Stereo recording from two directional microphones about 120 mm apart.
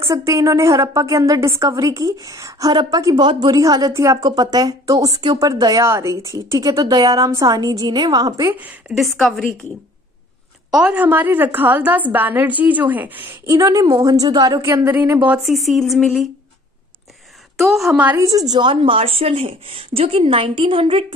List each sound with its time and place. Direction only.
0.1 s a woman's voice: 25° right (ahead or behind)
8.5 s a woman's voice: 15° right (ahead or behind)
8.9 s a woman's voice: centre (ahead or behind)
10.7 s a woman's voice: 10° right (ahead or behind)
13.5 s a woman's voice: 30° right (ahead or behind)
15.4 s a woman's voice: centre (ahead or behind)
17.6 s a woman's voice: centre (ahead or behind)
18.0 s speech: 25° right (ahead or behind); by 21.0 s 50° right (ahead or behind)